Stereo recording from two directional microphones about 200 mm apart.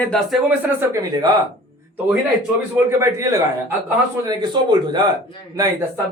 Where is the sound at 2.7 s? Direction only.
15° right (ahead or behind).